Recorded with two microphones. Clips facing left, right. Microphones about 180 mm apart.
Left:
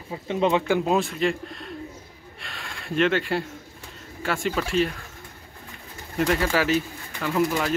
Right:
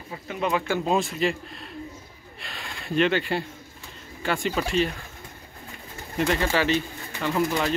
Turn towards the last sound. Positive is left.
turn(degrees=0)  # may be behind; listen again after turning